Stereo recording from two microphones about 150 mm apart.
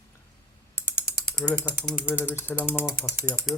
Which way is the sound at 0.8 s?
10° right (ahead or behind).